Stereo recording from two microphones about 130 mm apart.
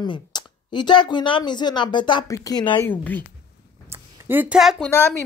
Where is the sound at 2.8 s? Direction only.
15° left (ahead or behind).